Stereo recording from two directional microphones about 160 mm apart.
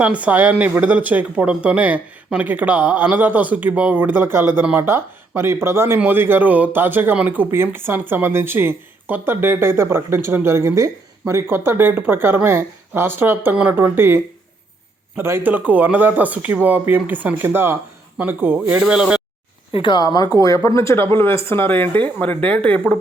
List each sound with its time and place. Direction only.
0.0 s speech: 10° right (ahead or behind)
19.7 s speech: 30° left (ahead or behind); by 22.8 s 10° left (ahead or behind)